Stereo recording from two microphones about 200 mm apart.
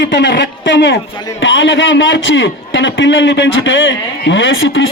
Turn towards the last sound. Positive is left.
turn(degrees=70)  # may be behind; listen again after turning